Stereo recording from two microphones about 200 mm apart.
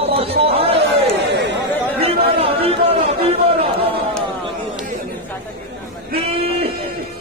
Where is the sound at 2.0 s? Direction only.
30° right (ahead or behind).